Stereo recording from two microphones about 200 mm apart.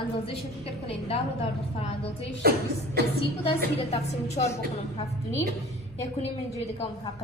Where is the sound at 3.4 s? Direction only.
30° left (ahead or behind).